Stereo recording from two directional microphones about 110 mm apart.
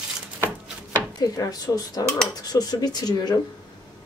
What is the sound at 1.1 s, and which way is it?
Speech, 35° left (ahead or behind).